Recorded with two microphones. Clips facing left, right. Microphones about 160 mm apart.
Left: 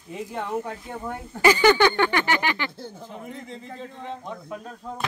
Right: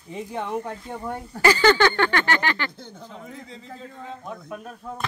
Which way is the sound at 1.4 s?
15° left (ahead or behind).